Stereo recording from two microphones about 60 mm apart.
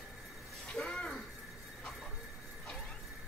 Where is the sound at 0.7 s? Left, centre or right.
Centre.